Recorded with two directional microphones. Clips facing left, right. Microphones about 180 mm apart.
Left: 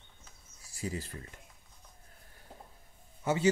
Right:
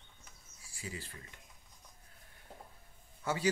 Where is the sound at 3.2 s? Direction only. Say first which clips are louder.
Left 5 dB; 20° left (ahead or behind).